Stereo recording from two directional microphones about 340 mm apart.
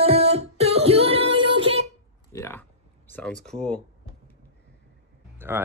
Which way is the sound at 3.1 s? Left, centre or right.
Centre.